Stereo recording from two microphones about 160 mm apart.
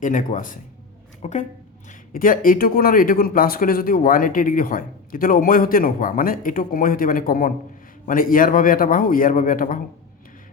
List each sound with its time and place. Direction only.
0.0 s speech: 50° left (ahead or behind)
1.9 s speech: 60° left (ahead or behind)